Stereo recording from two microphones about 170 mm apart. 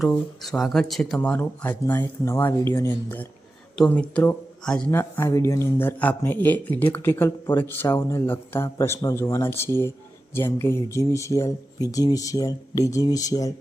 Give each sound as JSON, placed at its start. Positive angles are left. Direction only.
{"t": 0.0, "sound": "speech", "side_deg": 5}